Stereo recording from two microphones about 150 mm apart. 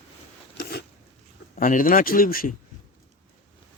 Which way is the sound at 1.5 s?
65° left (ahead or behind).